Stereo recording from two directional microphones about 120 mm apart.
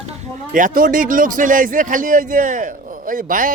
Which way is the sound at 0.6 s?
90° right.